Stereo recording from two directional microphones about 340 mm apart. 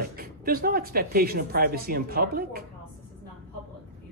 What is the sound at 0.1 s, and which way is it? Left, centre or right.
Speech, right.